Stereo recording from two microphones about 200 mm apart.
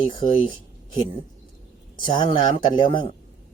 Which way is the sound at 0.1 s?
25° left (ahead or behind).